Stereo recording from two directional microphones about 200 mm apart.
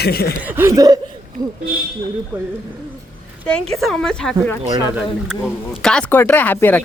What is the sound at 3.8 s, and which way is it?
Speech, centre (ahead or behind).